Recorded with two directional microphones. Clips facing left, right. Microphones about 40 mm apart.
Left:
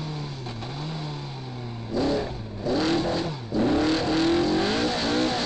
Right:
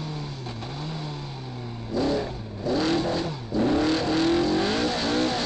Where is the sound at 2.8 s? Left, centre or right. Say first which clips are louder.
Even; left.